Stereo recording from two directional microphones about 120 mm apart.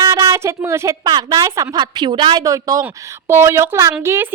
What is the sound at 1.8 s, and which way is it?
Speech, 40° right (ahead or behind).